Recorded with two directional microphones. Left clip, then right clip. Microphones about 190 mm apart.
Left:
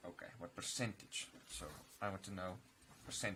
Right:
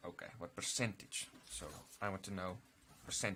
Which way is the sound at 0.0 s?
25° right (ahead or behind).